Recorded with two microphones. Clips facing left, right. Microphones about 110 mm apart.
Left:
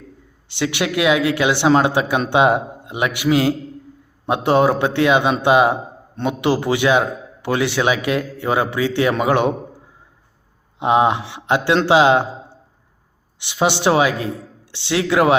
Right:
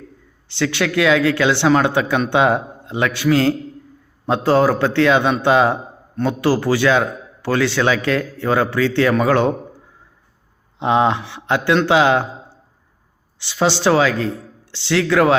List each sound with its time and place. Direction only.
0.4 s a man's voice: 20° left (ahead or behind)
10.8 s a man's voice: 20° left (ahead or behind)
13.4 s a man's voice: 20° left (ahead or behind)